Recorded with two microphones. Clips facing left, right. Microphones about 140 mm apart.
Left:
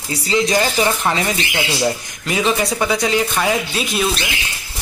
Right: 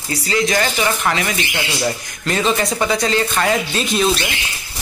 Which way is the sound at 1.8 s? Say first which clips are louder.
Left 1 dB; 10° left (ahead or behind).